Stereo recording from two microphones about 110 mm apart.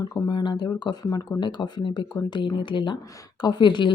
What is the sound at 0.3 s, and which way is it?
Speech, 40° left (ahead or behind).